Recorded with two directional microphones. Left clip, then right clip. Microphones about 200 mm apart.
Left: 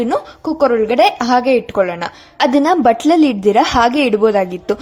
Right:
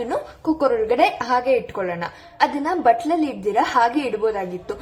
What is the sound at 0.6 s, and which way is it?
A woman's voice, 40° left (ahead or behind).